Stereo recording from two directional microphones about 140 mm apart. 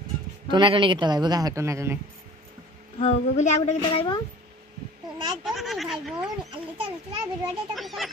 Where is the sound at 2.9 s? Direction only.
50° left (ahead or behind).